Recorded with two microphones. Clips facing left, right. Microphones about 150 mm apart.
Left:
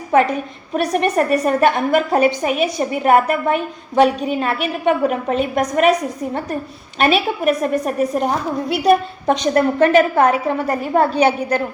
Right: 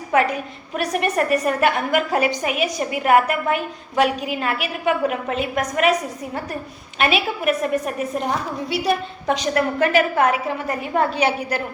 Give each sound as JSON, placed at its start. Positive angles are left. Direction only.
{"t": 0.7, "sound": "a woman's voice", "side_deg": 35}
{"t": 7.0, "sound": "a woman's voice", "side_deg": 35}
{"t": 9.6, "sound": "a woman's voice", "side_deg": 35}